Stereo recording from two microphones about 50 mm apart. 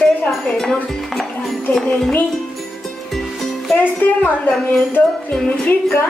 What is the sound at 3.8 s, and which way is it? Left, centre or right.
Speech, left.